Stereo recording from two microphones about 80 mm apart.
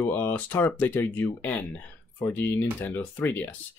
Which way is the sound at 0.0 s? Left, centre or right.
Left.